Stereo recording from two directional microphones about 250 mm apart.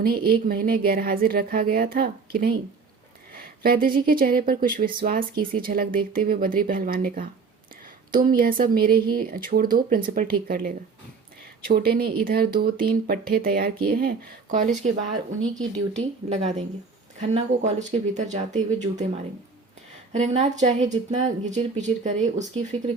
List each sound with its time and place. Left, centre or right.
0.0 s speech: right
16.0 s a woman's voice: right